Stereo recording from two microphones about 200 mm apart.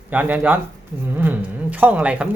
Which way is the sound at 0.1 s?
10° right (ahead or behind).